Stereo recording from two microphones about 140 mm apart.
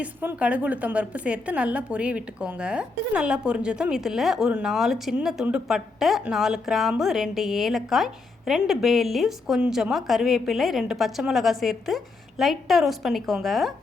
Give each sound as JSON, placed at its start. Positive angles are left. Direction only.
{"t": 0.0, "sound": "a woman's voice", "side_deg": -10}